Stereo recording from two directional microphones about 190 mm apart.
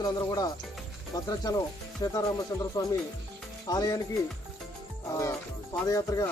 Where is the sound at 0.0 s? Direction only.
20° left (ahead or behind).